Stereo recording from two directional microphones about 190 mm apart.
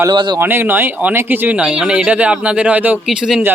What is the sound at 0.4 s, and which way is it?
Speech, 10° right (ahead or behind).